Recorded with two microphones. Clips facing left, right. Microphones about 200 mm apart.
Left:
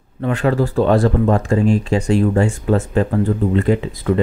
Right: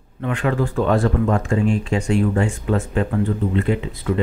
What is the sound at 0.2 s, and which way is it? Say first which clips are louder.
Speech: left 4 dB; 35° left (ahead or behind).